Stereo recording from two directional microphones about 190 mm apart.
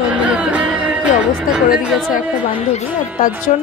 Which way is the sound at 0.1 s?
5° right (ahead or behind).